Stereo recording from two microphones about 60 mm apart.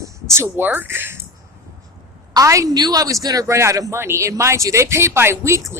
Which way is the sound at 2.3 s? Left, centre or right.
Right.